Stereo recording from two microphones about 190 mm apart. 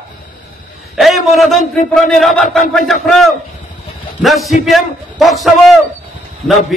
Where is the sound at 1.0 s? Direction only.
Centre (ahead or behind).